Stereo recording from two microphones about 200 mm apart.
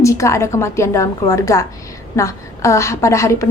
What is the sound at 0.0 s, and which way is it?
A woman's voice, 15° left (ahead or behind).